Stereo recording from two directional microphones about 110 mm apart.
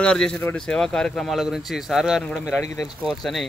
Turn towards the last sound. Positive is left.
turn(degrees=0)  # may be behind; listen again after turning